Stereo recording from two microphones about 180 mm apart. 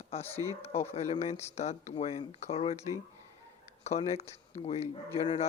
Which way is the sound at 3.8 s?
35° left (ahead or behind).